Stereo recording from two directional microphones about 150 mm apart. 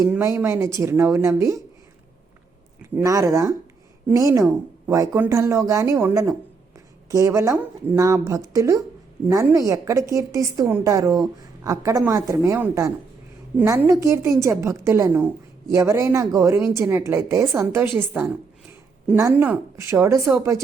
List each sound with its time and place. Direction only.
0.1 s a woman's voice: 15° right (ahead or behind)
2.9 s a woman's voice: 20° right (ahead or behind)